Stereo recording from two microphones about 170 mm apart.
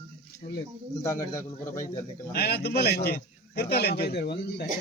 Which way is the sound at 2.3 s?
65° left (ahead or behind).